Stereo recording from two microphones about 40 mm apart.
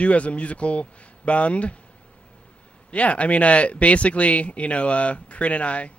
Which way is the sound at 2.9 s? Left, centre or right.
Left.